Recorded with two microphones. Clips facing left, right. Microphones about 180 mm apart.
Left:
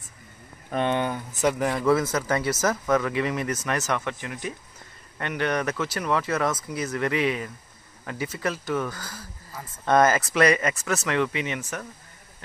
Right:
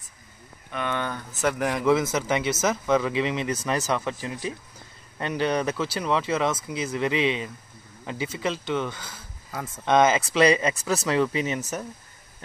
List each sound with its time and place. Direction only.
0.8 s speech: 20° left (ahead or behind)
1.6 s a man's voice: 5° right (ahead or behind)
1.9 s speech: 20° right (ahead or behind); by 11.7 s 35° right (ahead or behind)